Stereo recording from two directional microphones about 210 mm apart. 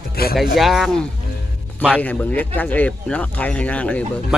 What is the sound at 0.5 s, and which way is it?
A man's voice, centre (ahead or behind).